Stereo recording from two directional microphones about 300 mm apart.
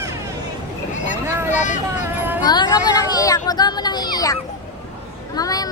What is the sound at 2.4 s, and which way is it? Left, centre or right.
A woman's voice, centre.